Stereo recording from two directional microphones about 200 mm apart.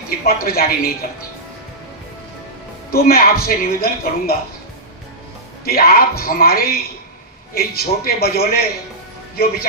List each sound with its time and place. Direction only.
0.3 s speech: 50° left (ahead or behind)
2.9 s speech: 50° left (ahead or behind)
5.6 s speech: 50° left (ahead or behind)